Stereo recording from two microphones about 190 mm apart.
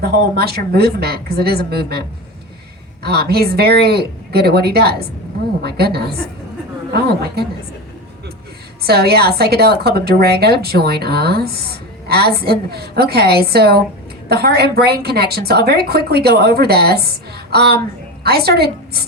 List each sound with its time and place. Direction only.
0.0 s a woman's voice: 55° right (ahead or behind)
8.8 s a woman's voice: 55° right (ahead or behind)